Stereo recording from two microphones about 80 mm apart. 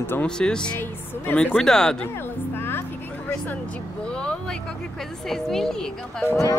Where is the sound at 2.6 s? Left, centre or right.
Left.